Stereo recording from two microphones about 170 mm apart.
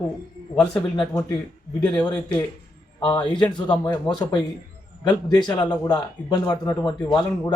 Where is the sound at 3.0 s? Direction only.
25° left (ahead or behind).